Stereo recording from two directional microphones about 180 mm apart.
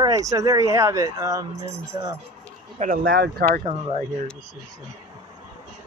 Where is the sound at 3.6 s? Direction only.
35° right (ahead or behind).